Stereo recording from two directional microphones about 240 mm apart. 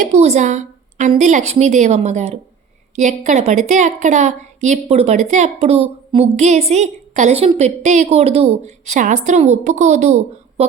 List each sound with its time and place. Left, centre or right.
0.0 s a woman's voice: right